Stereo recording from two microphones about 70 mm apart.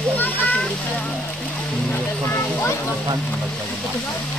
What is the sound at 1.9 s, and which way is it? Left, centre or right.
Vehicle, left.